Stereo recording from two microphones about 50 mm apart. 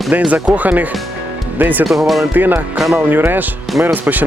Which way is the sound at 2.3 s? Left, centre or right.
Right.